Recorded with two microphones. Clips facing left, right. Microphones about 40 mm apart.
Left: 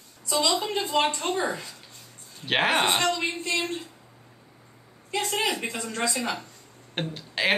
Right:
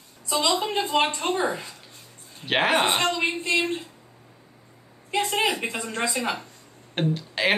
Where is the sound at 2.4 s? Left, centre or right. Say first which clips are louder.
Right 1 dB; centre.